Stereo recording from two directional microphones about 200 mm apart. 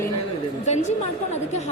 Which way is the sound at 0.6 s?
35° left (ahead or behind).